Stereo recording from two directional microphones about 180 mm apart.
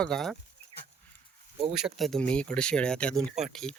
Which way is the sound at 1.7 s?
5° right (ahead or behind).